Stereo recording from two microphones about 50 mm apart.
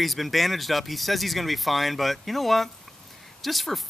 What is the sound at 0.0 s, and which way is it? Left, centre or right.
Speech, centre.